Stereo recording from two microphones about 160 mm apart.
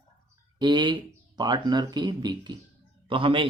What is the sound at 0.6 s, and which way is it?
A man's voice, 25° right (ahead or behind).